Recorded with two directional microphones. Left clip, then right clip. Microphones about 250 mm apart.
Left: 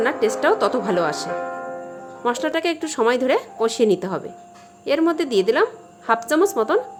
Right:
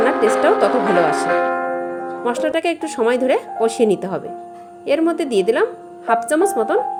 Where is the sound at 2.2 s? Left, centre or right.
Centre.